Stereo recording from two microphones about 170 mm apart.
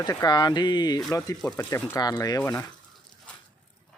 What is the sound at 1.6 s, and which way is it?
Speech, 15° left (ahead or behind).